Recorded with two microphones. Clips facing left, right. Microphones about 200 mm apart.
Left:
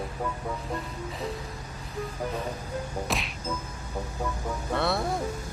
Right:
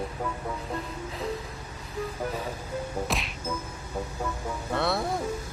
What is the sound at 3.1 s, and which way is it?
Speech, centre (ahead or behind).